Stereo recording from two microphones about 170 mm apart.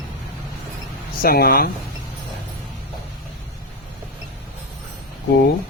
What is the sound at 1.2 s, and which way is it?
Speech, 60° left (ahead or behind).